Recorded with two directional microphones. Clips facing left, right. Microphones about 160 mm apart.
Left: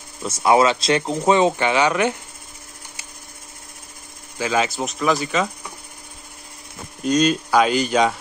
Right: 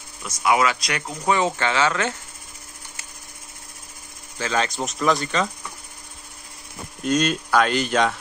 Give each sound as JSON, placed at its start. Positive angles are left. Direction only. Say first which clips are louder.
{"t": 0.2, "sound": "speech", "louder": "left 4 dB", "side_deg": 30}
{"t": 4.4, "sound": "speech", "louder": "left 3 dB", "side_deg": 10}
{"t": 7.0, "sound": "speech", "louder": "left 3 dB", "side_deg": 0}